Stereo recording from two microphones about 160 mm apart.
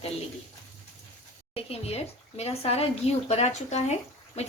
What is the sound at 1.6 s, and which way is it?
A woman's voice, 40° left (ahead or behind).